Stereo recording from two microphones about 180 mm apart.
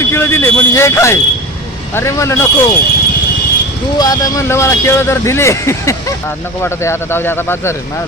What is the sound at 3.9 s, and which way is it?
Speech, 20° left (ahead or behind).